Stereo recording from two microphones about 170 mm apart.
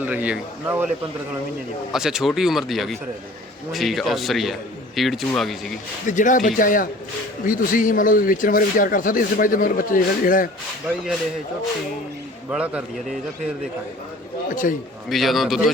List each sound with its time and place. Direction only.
0.0 s a man's voice: 10° right (ahead or behind)
6.1 s speech: 50° left (ahead or behind)
12.5 s a man's voice: 5° right (ahead or behind)
14.5 s speech: 50° left (ahead or behind)
15.1 s speech: centre (ahead or behind)